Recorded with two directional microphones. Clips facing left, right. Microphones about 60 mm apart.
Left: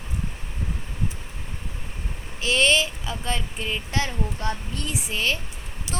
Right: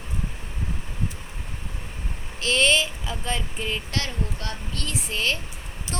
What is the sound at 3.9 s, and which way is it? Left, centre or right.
Speech, centre.